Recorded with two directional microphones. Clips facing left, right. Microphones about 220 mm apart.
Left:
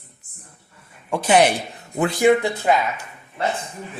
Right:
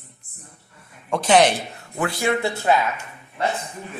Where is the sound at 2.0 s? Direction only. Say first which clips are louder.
Left 6 dB; 20° left (ahead or behind).